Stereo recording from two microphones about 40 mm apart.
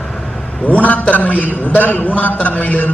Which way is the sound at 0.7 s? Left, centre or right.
Left.